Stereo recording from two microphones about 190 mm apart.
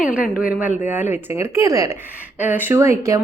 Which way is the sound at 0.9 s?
10° right (ahead or behind).